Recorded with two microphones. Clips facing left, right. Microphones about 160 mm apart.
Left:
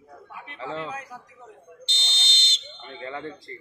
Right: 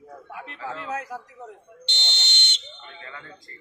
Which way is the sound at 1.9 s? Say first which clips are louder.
Right 2 dB; 70° right (ahead or behind).